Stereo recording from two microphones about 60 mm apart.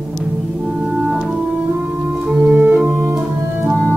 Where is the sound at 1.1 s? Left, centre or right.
Centre.